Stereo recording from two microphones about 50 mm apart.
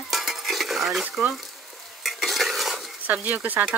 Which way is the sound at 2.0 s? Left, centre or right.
Centre.